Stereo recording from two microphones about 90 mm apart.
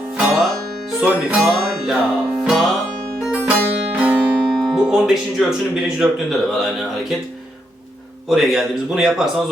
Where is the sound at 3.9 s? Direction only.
15° right (ahead or behind).